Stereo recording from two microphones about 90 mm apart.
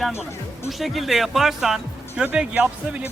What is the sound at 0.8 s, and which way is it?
Speech, centre (ahead or behind).